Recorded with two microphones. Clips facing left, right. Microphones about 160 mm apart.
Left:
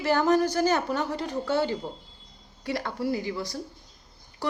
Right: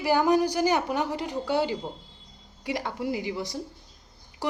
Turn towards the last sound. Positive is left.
turn(degrees=-20)  # may be behind; listen again after turning